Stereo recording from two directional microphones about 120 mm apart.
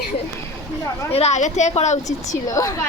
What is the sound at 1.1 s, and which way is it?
Speech, 60° left (ahead or behind).